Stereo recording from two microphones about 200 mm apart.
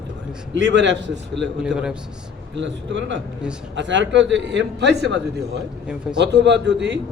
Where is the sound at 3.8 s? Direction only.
65° right (ahead or behind).